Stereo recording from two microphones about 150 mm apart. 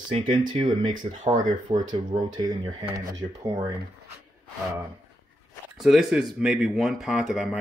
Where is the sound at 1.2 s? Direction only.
60° right (ahead or behind).